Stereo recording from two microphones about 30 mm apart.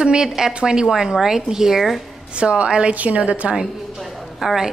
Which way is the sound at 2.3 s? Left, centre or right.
Right.